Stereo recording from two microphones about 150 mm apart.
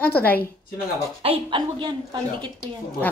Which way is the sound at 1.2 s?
35° right (ahead or behind).